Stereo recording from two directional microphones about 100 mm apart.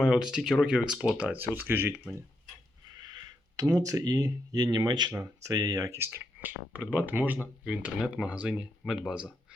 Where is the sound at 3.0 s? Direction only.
40° right (ahead or behind).